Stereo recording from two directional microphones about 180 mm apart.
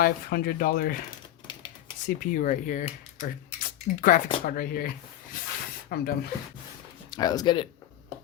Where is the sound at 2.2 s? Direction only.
50° left (ahead or behind).